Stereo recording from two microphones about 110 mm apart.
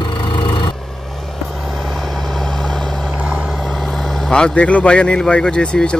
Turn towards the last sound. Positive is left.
turn(degrees=10)  # may be behind; listen again after turning